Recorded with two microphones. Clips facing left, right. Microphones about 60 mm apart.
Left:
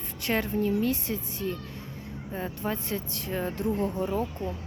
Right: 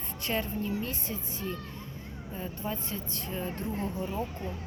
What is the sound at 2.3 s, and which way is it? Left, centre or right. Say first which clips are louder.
A woman's voice: left 4 dB; left.